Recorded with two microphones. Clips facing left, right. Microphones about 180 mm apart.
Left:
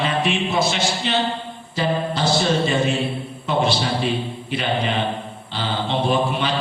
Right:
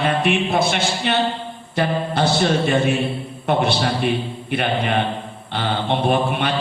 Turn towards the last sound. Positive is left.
turn(degrees=-55)  # may be behind; listen again after turning